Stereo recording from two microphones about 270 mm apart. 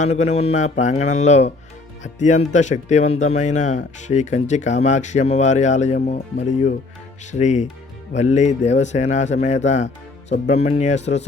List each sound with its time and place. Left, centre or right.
0.0 s speech: left